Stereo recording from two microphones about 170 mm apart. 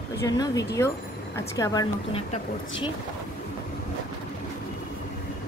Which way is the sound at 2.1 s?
35° left (ahead or behind).